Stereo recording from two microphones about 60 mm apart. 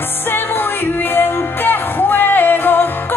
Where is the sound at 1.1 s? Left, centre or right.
Left.